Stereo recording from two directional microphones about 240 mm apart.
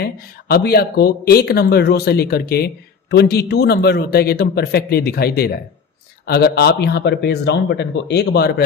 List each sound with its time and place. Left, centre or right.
0.0 s speech: left